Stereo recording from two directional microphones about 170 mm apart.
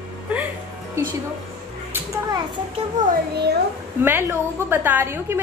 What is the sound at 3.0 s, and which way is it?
Speech, 45° right (ahead or behind).